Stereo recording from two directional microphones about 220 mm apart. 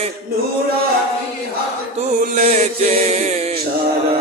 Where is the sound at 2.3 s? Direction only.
30° right (ahead or behind).